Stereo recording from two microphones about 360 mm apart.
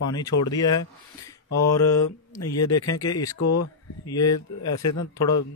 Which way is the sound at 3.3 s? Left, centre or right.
Left.